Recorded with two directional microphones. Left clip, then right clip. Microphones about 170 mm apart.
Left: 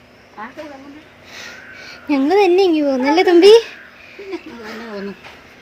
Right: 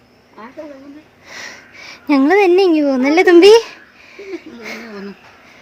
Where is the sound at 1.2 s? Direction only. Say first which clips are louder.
Right 2 dB; 50° right (ahead or behind).